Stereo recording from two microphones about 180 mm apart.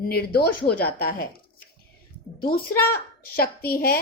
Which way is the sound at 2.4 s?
55° left (ahead or behind).